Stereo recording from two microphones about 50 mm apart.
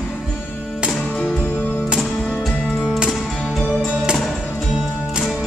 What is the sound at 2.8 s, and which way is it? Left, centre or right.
Music, centre.